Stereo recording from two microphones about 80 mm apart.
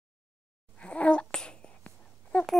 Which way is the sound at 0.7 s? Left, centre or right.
Centre.